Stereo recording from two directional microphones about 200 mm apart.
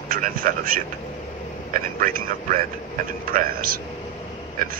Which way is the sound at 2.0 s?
45° right (ahead or behind).